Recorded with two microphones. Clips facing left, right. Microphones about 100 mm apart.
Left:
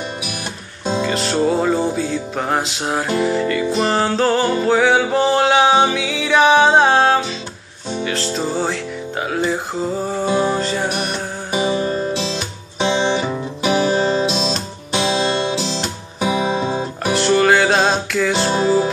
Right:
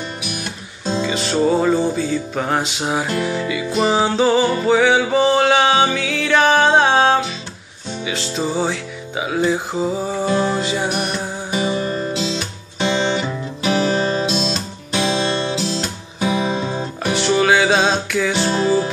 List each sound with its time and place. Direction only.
1.0 s music: centre (ahead or behind)
10.2 s music: 15° left (ahead or behind)
10.5 s music: 5° right (ahead or behind)
11.5 s music: 15° left (ahead or behind)
17.0 s music: centre (ahead or behind)
18.5 s music: 15° left (ahead or behind)